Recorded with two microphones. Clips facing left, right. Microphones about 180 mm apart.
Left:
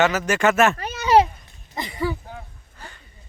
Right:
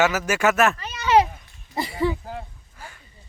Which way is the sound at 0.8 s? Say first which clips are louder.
Left 5 dB; 55° left (ahead or behind).